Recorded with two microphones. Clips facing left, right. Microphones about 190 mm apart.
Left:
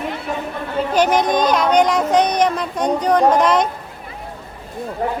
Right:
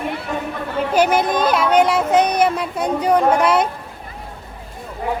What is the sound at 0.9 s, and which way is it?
Speech, 10° right (ahead or behind).